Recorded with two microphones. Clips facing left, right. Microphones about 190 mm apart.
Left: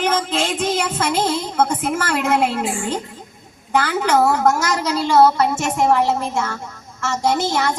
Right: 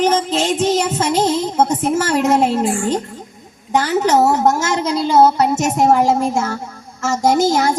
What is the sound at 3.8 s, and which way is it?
A woman's voice, 25° right (ahead or behind).